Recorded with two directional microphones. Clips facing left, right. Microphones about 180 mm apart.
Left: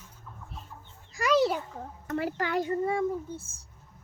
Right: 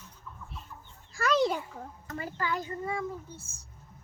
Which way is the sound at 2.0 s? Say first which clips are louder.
Left 5 dB; 65° left (ahead or behind).